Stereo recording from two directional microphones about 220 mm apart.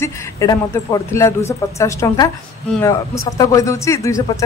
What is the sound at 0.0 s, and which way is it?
Speech, 15° left (ahead or behind).